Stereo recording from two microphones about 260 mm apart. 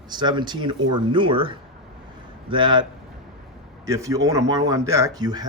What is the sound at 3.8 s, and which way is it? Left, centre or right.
Speech, centre.